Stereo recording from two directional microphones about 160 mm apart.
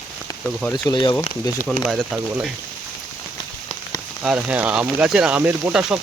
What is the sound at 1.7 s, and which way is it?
Speech, centre (ahead or behind).